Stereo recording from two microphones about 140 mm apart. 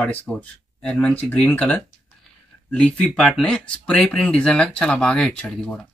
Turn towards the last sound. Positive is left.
turn(degrees=10)  # may be behind; listen again after turning